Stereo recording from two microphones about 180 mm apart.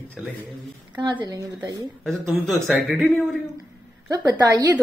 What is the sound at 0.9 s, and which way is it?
Speech, 25° right (ahead or behind).